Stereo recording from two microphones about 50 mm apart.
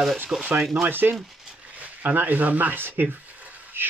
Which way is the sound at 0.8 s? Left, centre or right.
Right.